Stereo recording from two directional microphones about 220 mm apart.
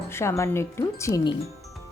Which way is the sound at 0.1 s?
10° left (ahead or behind).